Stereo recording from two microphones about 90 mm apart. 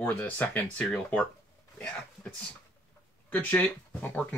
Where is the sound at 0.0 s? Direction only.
20° left (ahead or behind).